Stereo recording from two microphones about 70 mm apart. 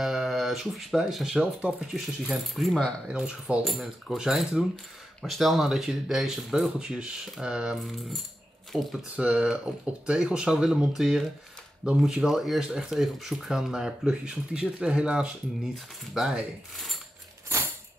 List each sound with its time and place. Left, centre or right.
0.0 s speech: centre
2.0 s speech: centre
3.1 s speech: centre
3.6 s speech: centre
9.1 s speech: centre